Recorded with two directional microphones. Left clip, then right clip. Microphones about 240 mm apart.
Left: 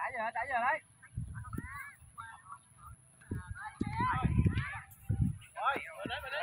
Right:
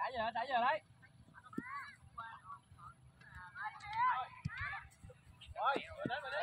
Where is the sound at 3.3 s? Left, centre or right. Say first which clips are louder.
Left 2 dB; left.